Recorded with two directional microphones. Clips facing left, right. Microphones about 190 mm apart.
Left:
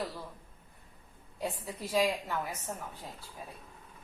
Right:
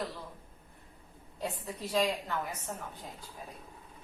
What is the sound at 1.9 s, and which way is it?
Speech, 10° left (ahead or behind).